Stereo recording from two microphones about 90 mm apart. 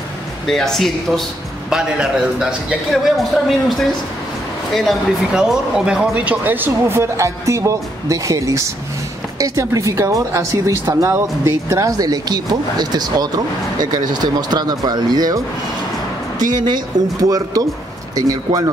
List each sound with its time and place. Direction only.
0.5 s a man's voice: 5° left (ahead or behind)
1.7 s a man's voice: 5° right (ahead or behind)
4.7 s speech: 5° right (ahead or behind); by 18.6 s 40° right (ahead or behind)